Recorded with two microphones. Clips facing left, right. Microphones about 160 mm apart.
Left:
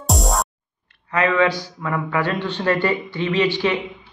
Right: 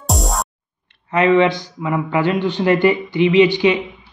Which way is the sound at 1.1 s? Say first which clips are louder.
Right 5 dB; 25° right (ahead or behind).